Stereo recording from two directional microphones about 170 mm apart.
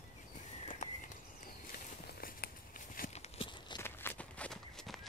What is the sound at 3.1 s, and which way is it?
Horse, 35° left (ahead or behind).